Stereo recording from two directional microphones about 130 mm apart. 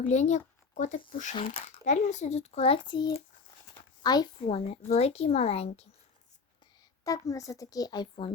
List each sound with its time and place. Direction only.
0.0 s a child's voice: 65° left (ahead or behind); by 4.3 s 30° left (ahead or behind)
4.4 s speech: 50° left (ahead or behind)
7.0 s a child's voice: 25° left (ahead or behind)